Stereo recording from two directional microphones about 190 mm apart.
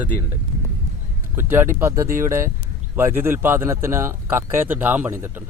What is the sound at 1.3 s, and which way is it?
Speech, 10° right (ahead or behind).